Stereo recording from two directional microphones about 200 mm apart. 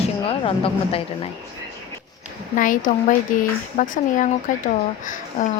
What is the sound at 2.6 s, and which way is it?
Speech, 40° left (ahead or behind).